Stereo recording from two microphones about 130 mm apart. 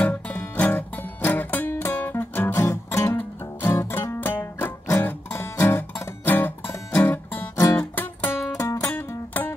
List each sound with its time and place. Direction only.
0.0 s music: 15° left (ahead or behind)